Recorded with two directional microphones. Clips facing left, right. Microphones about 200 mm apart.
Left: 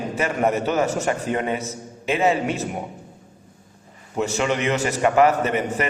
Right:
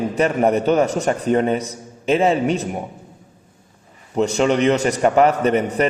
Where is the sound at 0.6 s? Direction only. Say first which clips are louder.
Right 5 dB; 5° left (ahead or behind).